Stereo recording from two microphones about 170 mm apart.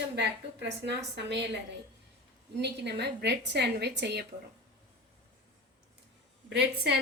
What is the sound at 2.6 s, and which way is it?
A woman's voice, 85° right.